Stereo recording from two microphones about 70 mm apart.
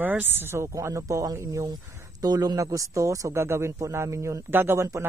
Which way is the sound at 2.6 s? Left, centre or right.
Right.